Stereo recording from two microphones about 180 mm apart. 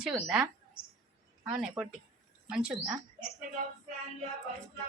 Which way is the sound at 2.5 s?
5° right (ahead or behind).